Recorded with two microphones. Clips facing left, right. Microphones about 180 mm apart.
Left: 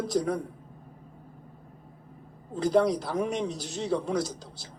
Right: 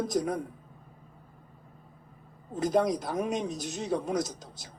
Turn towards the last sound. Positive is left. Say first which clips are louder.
# left 1 dB
turn(degrees=-20)  # may be behind; listen again after turning